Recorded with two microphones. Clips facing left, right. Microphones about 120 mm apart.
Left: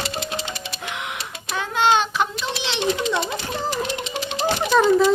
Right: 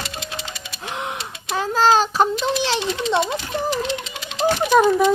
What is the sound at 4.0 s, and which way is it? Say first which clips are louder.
Music: left 6 dB; 30° left (ahead or behind).